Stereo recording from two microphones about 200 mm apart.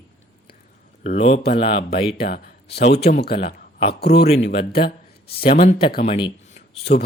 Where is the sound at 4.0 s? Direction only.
55° left (ahead or behind).